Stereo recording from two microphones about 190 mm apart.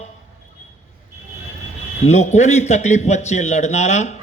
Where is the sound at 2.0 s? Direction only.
35° left (ahead or behind).